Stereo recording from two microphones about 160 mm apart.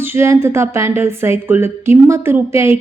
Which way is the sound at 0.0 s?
15° right (ahead or behind).